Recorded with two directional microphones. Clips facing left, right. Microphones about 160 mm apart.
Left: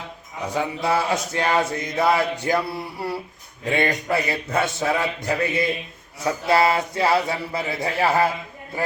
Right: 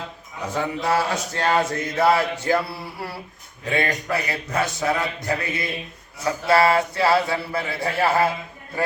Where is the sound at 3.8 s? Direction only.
25° left (ahead or behind).